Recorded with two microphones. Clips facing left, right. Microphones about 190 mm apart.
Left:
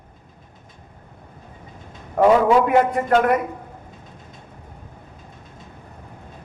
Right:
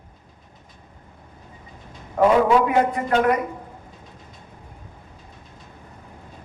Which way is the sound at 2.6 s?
50° left (ahead or behind).